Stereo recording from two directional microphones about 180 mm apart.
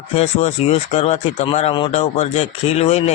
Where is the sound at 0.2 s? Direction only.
35° left (ahead or behind).